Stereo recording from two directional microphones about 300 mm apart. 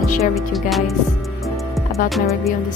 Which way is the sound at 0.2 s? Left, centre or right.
Centre.